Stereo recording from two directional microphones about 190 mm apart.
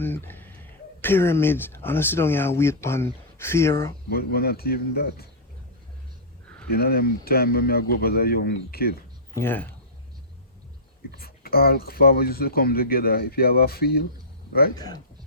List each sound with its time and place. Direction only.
0.0 s speech: 10° left (ahead or behind)
4.1 s speech: 55° left (ahead or behind)
6.7 s speech: 55° left (ahead or behind)
9.3 s speech: 10° left (ahead or behind)
11.2 s speech: 55° left (ahead or behind)
14.8 s speech: 20° left (ahead or behind)